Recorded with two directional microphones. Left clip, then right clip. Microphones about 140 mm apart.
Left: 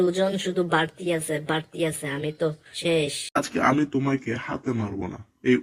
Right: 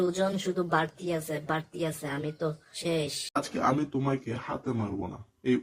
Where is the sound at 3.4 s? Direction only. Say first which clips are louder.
Left 6 dB; 20° left (ahead or behind).